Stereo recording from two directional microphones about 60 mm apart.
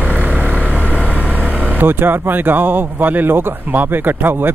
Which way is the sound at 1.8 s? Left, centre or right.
Right.